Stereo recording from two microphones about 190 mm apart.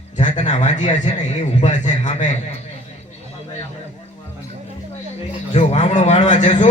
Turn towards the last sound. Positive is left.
turn(degrees=40)  # may be behind; listen again after turning